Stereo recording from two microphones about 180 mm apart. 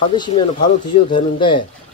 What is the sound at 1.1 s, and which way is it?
Speech, 25° left (ahead or behind).